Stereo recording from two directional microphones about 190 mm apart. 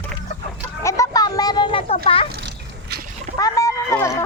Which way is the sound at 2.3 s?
60° right (ahead or behind).